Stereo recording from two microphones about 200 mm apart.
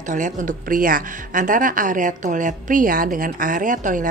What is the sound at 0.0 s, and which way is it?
Speech, 40° right (ahead or behind).